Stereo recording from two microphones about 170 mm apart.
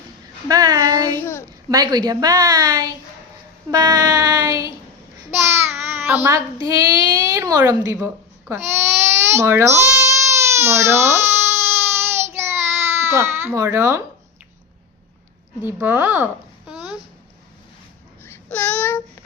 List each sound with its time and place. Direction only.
0.4 s a woman's voice: 20° right (ahead or behind)
1.1 s speech: 15° left (ahead or behind)
1.7 s a woman's voice: 20° right (ahead or behind)
5.3 s babbling: 15° right (ahead or behind)
6.7 s a child's voice: 20° right (ahead or behind)
8.0 s babbling: 15° right (ahead or behind)
10.3 s baby cry: 15° right (ahead or behind)
15.6 s speech: 10° right (ahead or behind)
18.2 s babbling: 10° left (ahead or behind)